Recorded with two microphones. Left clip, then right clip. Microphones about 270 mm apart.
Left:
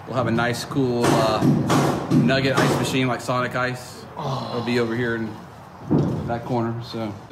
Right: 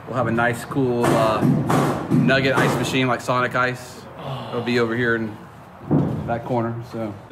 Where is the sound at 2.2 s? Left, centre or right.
Centre.